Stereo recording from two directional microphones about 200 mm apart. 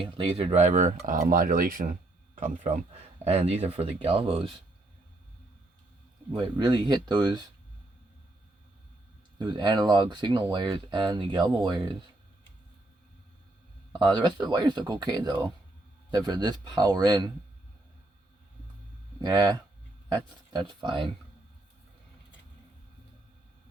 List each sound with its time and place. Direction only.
0.0 s speech: 25° right (ahead or behind); by 2.0 s 45° right (ahead or behind)
3.2 s speech: 30° right (ahead or behind)
6.3 s speech: 20° right (ahead or behind)
9.4 s speech: 20° right (ahead or behind)
13.9 s speech: 20° right (ahead or behind)
19.2 s speech: 15° right (ahead or behind)